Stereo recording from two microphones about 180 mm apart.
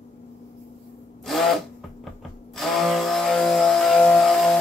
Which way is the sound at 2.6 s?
Centre (ahead or behind).